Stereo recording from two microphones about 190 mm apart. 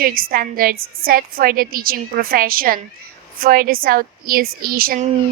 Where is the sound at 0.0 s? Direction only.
50° right (ahead or behind).